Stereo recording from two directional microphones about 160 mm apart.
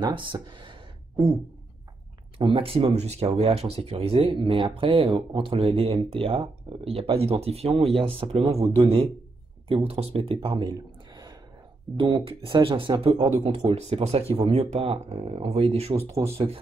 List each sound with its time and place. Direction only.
0.0 s speech: 30° right (ahead or behind)
2.5 s speech: 35° right (ahead or behind)
12.0 s speech: 30° right (ahead or behind)
13.5 s speech: 40° right (ahead or behind)